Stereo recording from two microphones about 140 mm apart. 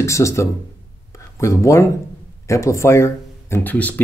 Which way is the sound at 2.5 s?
20° left (ahead or behind).